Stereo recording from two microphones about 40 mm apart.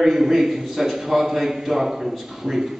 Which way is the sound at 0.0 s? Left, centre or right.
Centre.